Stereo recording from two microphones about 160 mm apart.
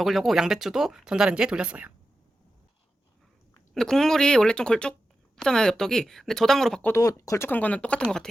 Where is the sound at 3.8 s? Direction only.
5° left (ahead or behind).